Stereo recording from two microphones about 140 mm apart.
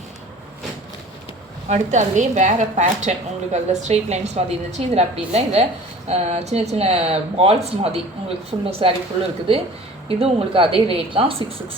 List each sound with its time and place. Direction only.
1.6 s a woman's voice: 55° right (ahead or behind); by 9.0 s 40° right (ahead or behind)
10.1 s a woman's voice: 40° right (ahead or behind)